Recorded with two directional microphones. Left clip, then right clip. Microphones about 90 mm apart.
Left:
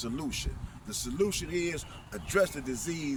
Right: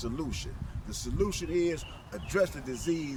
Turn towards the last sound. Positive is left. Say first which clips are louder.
# right 2 dB
turn(degrees=-15)  # may be behind; listen again after turning